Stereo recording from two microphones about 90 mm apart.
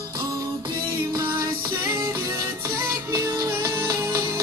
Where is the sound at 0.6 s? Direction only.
60° right (ahead or behind).